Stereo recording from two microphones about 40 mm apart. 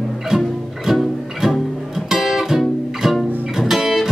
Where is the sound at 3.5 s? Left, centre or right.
Centre.